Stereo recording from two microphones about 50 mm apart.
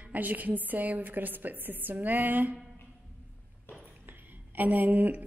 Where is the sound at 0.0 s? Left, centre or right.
Right.